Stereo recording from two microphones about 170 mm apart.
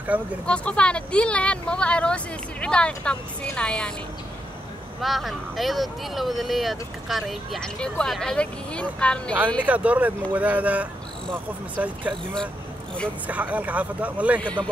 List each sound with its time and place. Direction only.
0.1 s speech: 10° right (ahead or behind)
0.5 s speech: 5° left (ahead or behind)
5.0 s speech: centre (ahead or behind)
9.7 s speech: 10° right (ahead or behind)
13.3 s speech: 10° right (ahead or behind)
14.4 s a man's voice: 10° left (ahead or behind)